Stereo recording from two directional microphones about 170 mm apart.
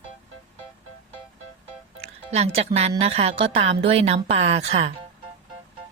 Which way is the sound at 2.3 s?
40° right (ahead or behind).